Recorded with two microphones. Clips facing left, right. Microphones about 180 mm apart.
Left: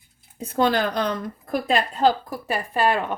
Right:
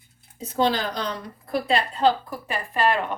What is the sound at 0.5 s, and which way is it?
A woman's voice, 55° left (ahead or behind).